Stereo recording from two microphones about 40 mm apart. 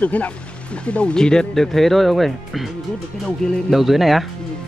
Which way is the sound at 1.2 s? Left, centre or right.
Centre.